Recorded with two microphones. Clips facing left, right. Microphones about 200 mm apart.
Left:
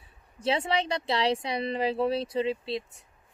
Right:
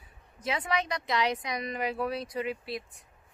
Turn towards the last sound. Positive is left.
turn(degrees=25)  # may be behind; listen again after turning